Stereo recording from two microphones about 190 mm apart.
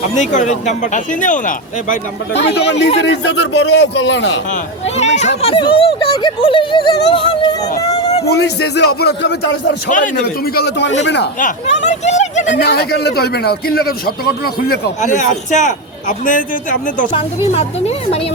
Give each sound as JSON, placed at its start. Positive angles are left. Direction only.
{"t": 0.1, "sound": "speech", "side_deg": 40}
{"t": 2.5, "sound": "speech", "side_deg": 65}
{"t": 4.9, "sound": "speech", "side_deg": 35}
{"t": 8.3, "sound": "speech", "side_deg": 60}
{"t": 11.3, "sound": "speech", "side_deg": 40}
{"t": 12.5, "sound": "a man's voice", "side_deg": 60}
{"t": 17.1, "sound": "speech", "side_deg": 30}